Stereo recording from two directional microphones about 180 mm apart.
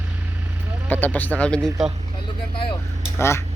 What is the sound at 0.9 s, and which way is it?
Speech, 10° left (ahead or behind).